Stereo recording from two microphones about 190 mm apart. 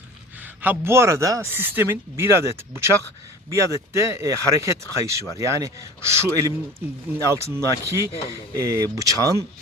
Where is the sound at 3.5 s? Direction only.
15° right (ahead or behind).